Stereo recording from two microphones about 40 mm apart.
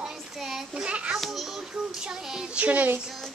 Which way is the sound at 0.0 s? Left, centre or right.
Centre.